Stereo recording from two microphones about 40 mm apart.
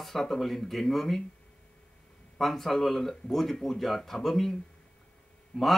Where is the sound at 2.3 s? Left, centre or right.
Centre.